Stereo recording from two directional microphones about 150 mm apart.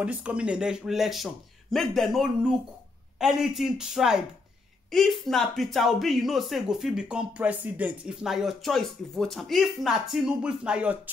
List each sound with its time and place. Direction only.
0.0 s speech: 10° right (ahead or behind)